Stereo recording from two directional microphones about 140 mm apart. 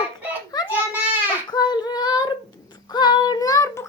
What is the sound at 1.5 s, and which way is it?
Child singing, 30° left (ahead or behind).